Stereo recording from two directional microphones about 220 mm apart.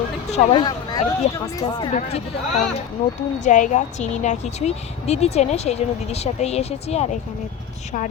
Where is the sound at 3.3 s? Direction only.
35° left (ahead or behind).